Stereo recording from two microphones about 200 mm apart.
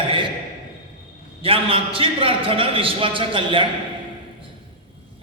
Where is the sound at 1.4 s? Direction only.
25° right (ahead or behind).